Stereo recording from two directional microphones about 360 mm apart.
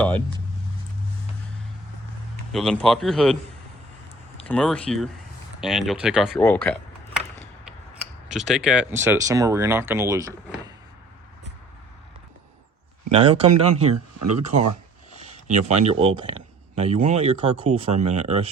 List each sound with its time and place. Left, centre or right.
2.5 s speech: centre
4.4 s speech: centre
8.3 s speech: centre
13.1 s speech: centre
13.5 s speech: right
15.2 s speech: centre